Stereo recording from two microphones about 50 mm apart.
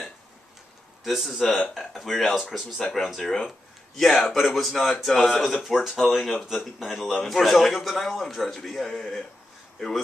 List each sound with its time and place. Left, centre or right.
1.0 s a man's voice: centre